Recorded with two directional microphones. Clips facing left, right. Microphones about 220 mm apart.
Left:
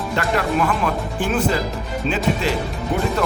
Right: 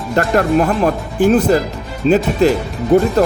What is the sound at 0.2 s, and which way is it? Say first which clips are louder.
Speech: right 7 dB; 45° right (ahead or behind).